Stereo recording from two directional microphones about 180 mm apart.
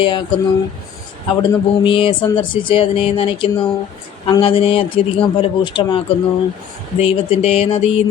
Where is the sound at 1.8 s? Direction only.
30° left (ahead or behind).